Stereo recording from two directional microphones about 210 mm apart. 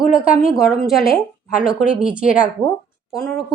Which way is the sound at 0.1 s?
5° right (ahead or behind).